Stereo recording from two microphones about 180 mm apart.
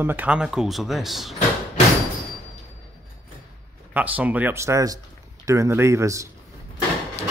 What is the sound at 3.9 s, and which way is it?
Speech, 10° right (ahead or behind).